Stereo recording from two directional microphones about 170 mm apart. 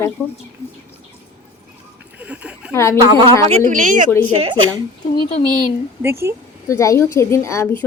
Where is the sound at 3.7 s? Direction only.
50° right (ahead or behind).